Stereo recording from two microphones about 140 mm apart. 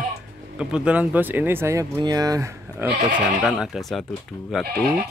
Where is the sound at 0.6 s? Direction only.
5° right (ahead or behind); by 2.9 s 20° right (ahead or behind).